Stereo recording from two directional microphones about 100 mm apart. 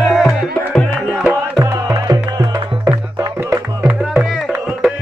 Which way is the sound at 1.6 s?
35° right (ahead or behind).